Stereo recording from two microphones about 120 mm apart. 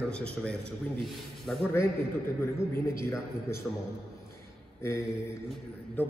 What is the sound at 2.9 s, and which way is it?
Speech, 20° left (ahead or behind).